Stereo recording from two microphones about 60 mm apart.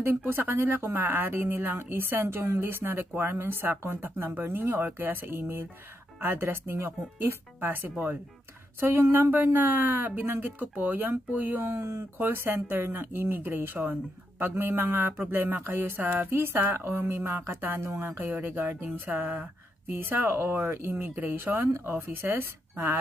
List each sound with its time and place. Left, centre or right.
0.0 s speech: right
11.6 s speech: right